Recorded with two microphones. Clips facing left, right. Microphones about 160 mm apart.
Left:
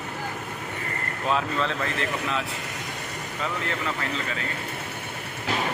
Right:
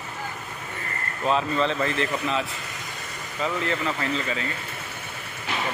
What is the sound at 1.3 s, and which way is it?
Speech, centre (ahead or behind).